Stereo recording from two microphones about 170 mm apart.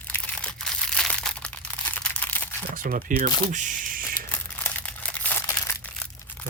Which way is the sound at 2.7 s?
55° right (ahead or behind).